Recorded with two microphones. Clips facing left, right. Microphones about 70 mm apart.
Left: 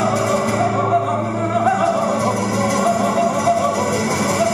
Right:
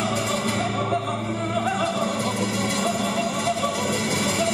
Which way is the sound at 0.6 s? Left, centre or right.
Left.